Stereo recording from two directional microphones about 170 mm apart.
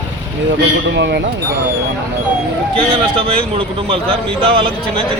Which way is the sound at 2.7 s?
30° right (ahead or behind).